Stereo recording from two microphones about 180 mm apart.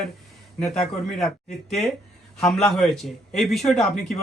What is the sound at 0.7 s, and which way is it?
Speech, 40° left (ahead or behind).